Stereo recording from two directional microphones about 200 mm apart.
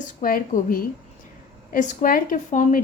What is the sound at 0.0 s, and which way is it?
A woman's voice, 40° left (ahead or behind).